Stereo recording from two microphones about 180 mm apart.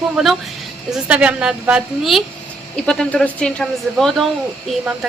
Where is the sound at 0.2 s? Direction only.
Centre (ahead or behind).